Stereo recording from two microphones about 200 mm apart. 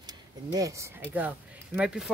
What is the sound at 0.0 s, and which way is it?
Speech, 15° right (ahead or behind).